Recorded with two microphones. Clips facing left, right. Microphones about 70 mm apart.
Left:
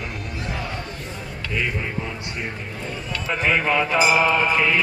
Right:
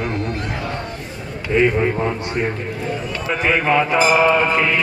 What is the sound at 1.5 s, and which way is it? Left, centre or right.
Speech, right.